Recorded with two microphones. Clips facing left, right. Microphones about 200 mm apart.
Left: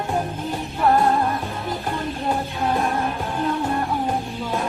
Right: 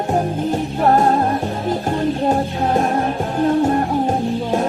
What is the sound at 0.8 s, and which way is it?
Music, 40° right (ahead or behind).